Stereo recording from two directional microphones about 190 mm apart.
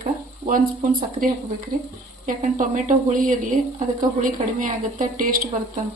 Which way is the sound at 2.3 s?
45° right (ahead or behind).